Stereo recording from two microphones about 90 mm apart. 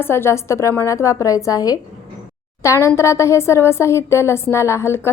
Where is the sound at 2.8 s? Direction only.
30° left (ahead or behind).